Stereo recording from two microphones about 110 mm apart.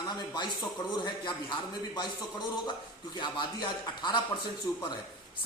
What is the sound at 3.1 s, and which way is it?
Speech, 45° left (ahead or behind).